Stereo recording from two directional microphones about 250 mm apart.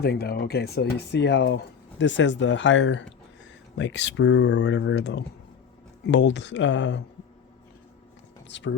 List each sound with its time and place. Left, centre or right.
0.0 s speech: left
8.4 s speech: left